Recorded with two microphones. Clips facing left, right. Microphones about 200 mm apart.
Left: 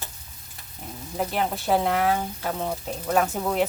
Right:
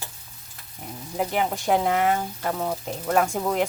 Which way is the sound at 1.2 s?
10° right (ahead or behind).